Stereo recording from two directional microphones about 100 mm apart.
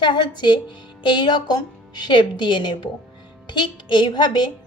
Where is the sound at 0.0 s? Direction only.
50° left (ahead or behind).